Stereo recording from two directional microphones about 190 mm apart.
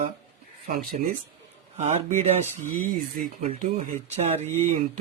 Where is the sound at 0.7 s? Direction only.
50° right (ahead or behind).